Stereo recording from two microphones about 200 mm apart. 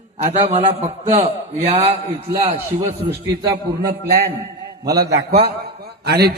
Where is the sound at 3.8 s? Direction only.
50° right (ahead or behind).